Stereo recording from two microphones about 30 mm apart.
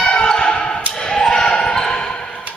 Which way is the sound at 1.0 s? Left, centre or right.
Left.